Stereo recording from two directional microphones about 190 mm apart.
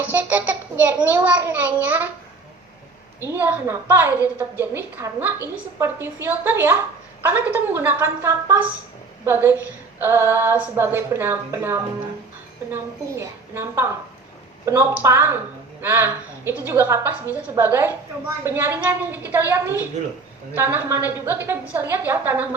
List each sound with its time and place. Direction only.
0.1 s a woman's voice: 10° right (ahead or behind)
3.2 s a woman's voice: 10° right (ahead or behind)